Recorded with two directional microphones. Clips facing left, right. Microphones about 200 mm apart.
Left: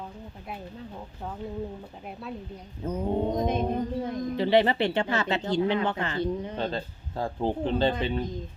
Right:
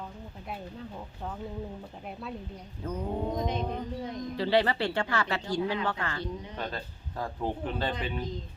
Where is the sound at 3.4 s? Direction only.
50° left (ahead or behind).